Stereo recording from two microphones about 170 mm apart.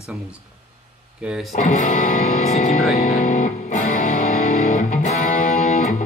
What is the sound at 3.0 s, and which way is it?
Music, 60° left (ahead or behind).